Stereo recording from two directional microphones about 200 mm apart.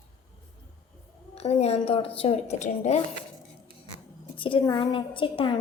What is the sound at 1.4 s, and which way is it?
A woman's voice, 30° left (ahead or behind).